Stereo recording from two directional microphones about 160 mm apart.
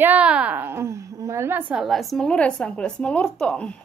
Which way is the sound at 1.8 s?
Centre (ahead or behind).